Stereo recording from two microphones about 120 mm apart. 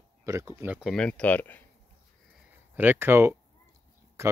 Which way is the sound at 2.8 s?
15° right (ahead or behind).